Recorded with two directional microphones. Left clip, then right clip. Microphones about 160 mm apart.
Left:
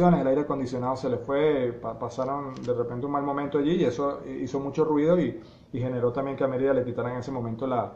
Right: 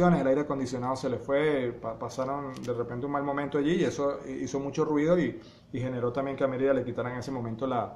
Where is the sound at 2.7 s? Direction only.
15° right (ahead or behind).